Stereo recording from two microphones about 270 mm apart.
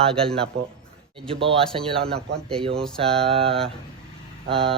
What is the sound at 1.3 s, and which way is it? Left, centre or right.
Speech, centre.